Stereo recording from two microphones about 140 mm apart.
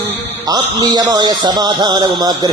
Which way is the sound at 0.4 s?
25° right (ahead or behind).